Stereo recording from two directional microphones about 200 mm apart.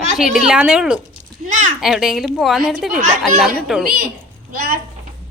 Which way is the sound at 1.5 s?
40° right (ahead or behind).